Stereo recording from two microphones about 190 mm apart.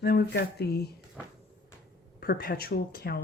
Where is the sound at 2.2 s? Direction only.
55° left (ahead or behind).